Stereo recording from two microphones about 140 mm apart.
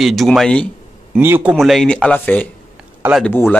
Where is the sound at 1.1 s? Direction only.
15° right (ahead or behind).